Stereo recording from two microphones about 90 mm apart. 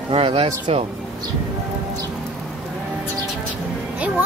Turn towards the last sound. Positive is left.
turn(degrees=-15)  # may be behind; listen again after turning